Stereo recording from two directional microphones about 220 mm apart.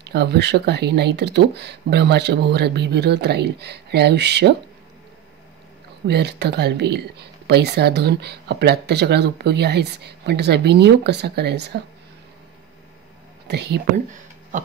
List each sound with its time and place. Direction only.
0.0 s speech: 50° right (ahead or behind)
6.0 s speech: 50° right (ahead or behind)
13.5 s speech: 50° right (ahead or behind)